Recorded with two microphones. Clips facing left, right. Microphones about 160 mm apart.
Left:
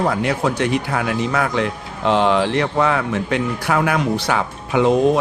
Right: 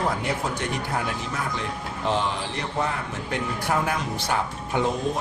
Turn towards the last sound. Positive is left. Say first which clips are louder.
# left 10 dB
turn(degrees=85)